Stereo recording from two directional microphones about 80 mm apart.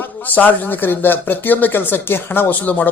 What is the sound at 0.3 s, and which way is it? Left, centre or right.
A man's voice, left.